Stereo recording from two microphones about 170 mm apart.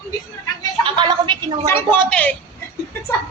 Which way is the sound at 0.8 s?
30° right (ahead or behind).